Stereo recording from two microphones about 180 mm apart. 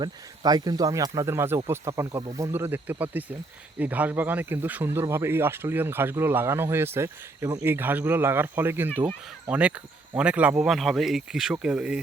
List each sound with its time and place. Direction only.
0.0 s speech: 20° right (ahead or behind); by 11.9 s 5° right (ahead or behind)